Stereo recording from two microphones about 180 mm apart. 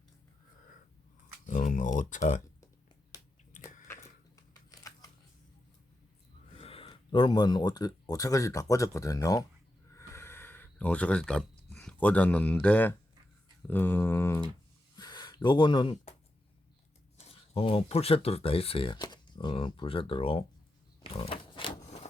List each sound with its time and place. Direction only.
1.5 s speech: 45° left (ahead or behind)
4.4 s a sound: 20° left (ahead or behind)
6.6 s speech: 30° left (ahead or behind)
9.9 s a sound: 15° left (ahead or behind)
14.9 s gasp: 25° left (ahead or behind)
17.2 s speech: 35° left (ahead or behind)
21.0 s pig: 30° left (ahead or behind)